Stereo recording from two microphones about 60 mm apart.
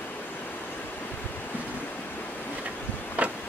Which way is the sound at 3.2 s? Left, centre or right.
Right.